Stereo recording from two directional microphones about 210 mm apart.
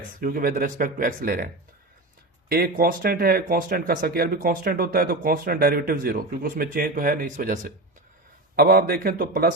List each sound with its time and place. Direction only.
0.2 s speech: 45° right (ahead or behind)
2.5 s speech: 45° right (ahead or behind)